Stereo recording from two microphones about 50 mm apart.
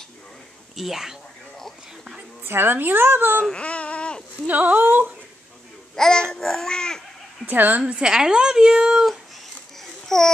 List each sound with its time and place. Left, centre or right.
0.7 s a woman's voice: centre
2.4 s a woman's voice: right
3.6 s baby cry: left
4.5 s speech: right
5.9 s babbling: centre
7.4 s speech: right
7.8 s a woman's voice: centre
10.0 s speech: centre